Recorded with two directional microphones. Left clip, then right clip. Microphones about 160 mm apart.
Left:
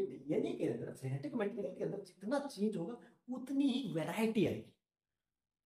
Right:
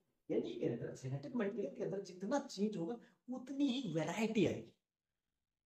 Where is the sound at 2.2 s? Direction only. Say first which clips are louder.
Left 2 dB; 20° right (ahead or behind).